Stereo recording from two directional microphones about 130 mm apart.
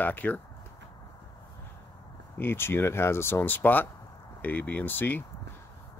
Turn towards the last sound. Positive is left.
turn(degrees=15)  # may be behind; listen again after turning